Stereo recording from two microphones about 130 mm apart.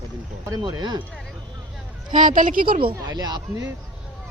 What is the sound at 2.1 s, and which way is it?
Speech, 85° right.